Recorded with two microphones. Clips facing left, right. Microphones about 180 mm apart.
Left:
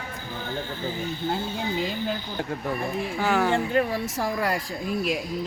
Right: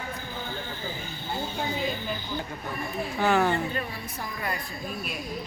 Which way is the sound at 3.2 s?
10° left (ahead or behind).